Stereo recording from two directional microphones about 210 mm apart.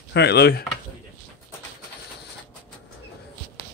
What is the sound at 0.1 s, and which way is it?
Speech, 50° left (ahead or behind).